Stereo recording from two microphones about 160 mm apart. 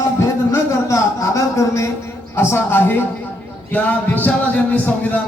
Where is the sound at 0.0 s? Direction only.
15° left (ahead or behind).